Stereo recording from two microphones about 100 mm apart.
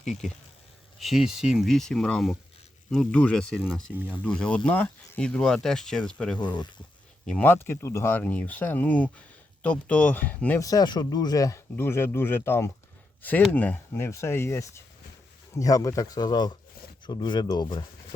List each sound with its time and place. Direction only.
0.9 s speech: centre (ahead or behind)
3.5 s speech: 5° right (ahead or behind)
4.2 s speech: 10° left (ahead or behind)
10.6 s speech: 40° left (ahead or behind)
11.8 s speech: 25° left (ahead or behind); by 17.8 s 45° left (ahead or behind)